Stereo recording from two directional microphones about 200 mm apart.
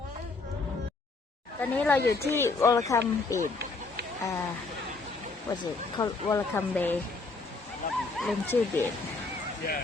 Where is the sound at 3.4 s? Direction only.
55° right (ahead or behind).